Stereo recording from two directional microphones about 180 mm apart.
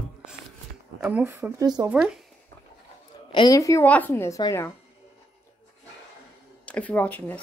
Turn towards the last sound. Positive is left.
turn(degrees=10)  # may be behind; listen again after turning